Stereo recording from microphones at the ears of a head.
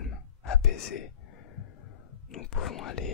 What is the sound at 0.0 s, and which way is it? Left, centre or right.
Whispering, left.